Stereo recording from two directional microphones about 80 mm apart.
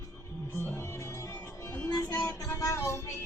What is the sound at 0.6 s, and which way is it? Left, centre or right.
Music, left.